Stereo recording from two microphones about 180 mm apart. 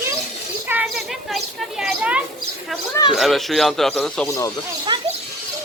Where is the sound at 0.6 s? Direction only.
5° right (ahead or behind).